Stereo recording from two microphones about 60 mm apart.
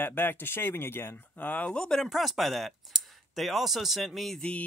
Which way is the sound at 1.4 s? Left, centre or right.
Left.